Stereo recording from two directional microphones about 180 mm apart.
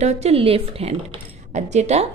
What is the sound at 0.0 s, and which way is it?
Speech, 40° right (ahead or behind).